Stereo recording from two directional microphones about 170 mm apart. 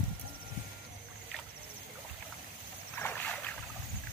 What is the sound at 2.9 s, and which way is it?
Boat, 10° left (ahead or behind).